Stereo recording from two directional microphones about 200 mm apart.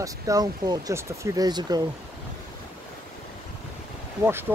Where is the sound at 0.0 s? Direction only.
20° right (ahead or behind).